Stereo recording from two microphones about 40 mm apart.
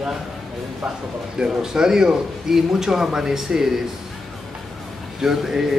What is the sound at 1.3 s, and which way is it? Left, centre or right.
Speech, centre.